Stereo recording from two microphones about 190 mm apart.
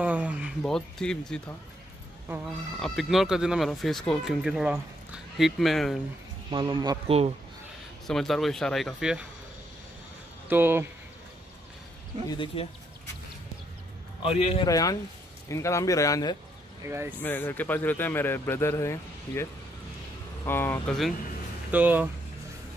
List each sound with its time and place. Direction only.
0.0 s a sound: 10° right (ahead or behind)
0.6 s speech: 5° left (ahead or behind)
2.2 s speech: 10° right (ahead or behind)
6.5 s a man's voice: 25° right (ahead or behind)
8.1 s speech: centre (ahead or behind)
10.5 s speech: 10° right (ahead or behind)
12.3 s speech: 25° left (ahead or behind)
14.6 s speech: 20° left (ahead or behind)
16.8 s speech: 15° right (ahead or behind)
17.2 s speech: 10° left (ahead or behind)
20.4 s speech: 10° left (ahead or behind)
21.6 s speech: 10° right (ahead or behind)